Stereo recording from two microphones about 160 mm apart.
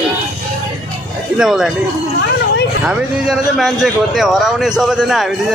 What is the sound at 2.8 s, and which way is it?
Speech, centre (ahead or behind).